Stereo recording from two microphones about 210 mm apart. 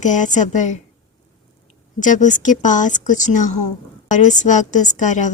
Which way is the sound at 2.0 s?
35° left (ahead or behind).